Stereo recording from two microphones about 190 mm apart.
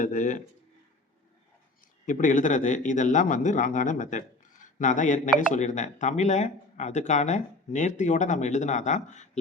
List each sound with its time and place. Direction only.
0.0 s speech: 40° left (ahead or behind)
2.0 s speech: 40° left (ahead or behind)